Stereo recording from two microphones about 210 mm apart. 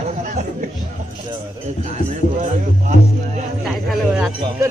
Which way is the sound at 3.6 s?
5° right (ahead or behind).